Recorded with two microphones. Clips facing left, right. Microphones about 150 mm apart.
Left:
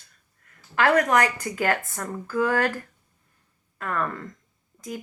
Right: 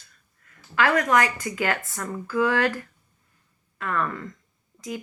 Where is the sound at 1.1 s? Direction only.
45° left (ahead or behind).